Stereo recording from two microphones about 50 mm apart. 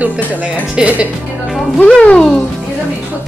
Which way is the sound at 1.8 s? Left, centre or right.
Left.